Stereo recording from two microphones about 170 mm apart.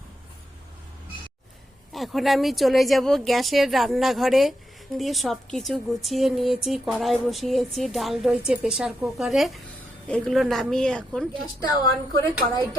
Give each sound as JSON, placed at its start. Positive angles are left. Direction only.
{"t": 1.9, "sound": "a woman's voice", "side_deg": 0}
{"t": 11.6, "sound": "a woman's voice", "side_deg": 20}